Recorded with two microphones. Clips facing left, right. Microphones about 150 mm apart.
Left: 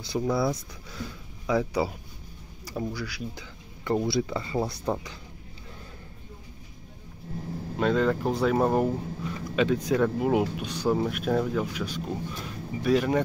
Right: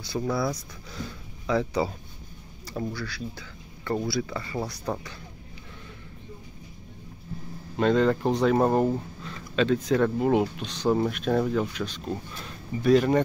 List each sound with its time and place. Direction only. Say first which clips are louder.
0.0 s speech: left 1 dB; 20° left (ahead or behind)
1.5 s speech: even; 10° left (ahead or behind)
7.7 s speech: right 2 dB; 5° left (ahead or behind)
9.2 s speech: left 1 dB; 10° left (ahead or behind)